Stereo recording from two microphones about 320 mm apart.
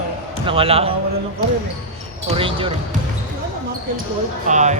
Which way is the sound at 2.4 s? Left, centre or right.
Centre.